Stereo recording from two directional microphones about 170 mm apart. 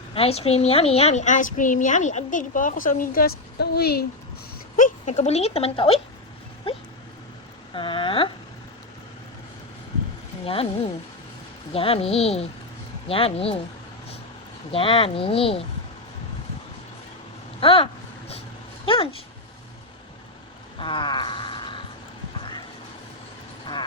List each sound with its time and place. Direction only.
0.1 s a woman's voice: 35° left (ahead or behind); by 4.0 s 65° left (ahead or behind)
4.8 s speech: 45° left (ahead or behind)
10.4 s speech: 35° left (ahead or behind)
14.7 s speech: 30° left (ahead or behind)
17.6 s speech: 30° left (ahead or behind)
20.7 s a sound: 30° left (ahead or behind)